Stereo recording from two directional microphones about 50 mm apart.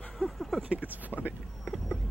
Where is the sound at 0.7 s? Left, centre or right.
Right.